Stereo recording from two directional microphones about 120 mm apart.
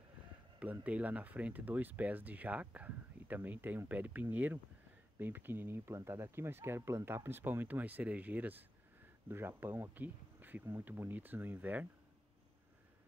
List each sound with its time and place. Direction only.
0.6 s speech: 10° right (ahead or behind)